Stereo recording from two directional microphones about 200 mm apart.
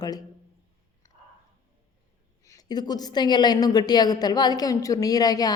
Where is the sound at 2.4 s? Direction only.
15° left (ahead or behind).